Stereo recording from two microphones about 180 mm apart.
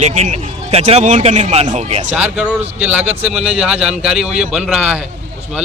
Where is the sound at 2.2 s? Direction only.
10° right (ahead or behind).